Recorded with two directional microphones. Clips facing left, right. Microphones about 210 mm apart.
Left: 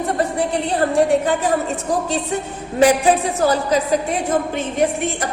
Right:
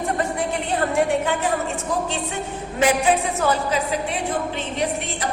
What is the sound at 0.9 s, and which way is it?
Speech, 35° left (ahead or behind).